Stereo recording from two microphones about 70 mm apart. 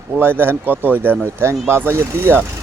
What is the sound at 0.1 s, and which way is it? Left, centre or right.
Speech, right.